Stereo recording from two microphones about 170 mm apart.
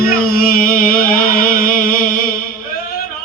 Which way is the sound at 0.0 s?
60° left (ahead or behind).